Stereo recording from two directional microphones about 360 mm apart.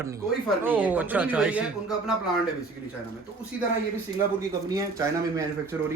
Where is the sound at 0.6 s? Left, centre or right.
Centre.